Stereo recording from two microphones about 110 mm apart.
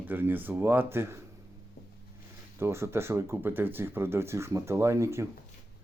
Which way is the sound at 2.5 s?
25° right (ahead or behind).